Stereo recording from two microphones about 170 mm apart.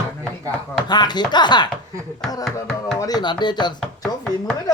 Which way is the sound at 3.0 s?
25° left (ahead or behind).